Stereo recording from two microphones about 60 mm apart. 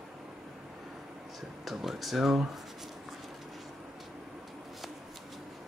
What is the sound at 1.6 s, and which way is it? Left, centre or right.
Speech, centre.